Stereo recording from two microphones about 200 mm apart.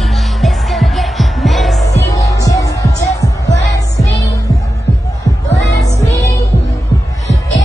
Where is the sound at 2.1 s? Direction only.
15° left (ahead or behind).